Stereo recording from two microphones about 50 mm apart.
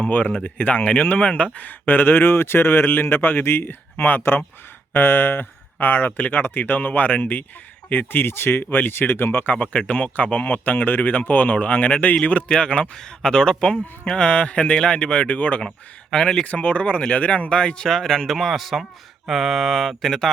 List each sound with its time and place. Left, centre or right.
0.0 s speech: left
1.9 s speech: left
9.9 s speech: left
13.0 s speech: centre; by 15.6 s left
16.1 s speech: centre